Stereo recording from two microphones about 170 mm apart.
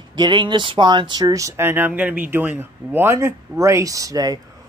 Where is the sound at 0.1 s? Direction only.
25° right (ahead or behind).